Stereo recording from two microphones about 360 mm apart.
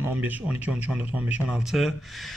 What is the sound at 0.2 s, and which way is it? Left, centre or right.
Speech, centre.